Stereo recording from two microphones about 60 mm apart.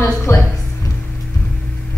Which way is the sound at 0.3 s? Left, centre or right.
Left.